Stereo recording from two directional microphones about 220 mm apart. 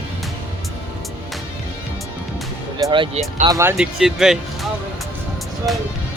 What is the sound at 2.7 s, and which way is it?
Speech, 20° right (ahead or behind).